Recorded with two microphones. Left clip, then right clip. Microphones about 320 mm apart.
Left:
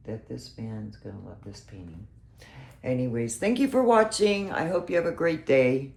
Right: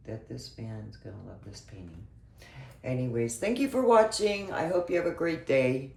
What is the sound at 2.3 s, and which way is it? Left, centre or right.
Speech, left.